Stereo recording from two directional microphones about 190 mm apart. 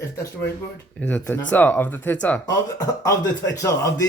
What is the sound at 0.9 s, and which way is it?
Speech, 10° left (ahead or behind).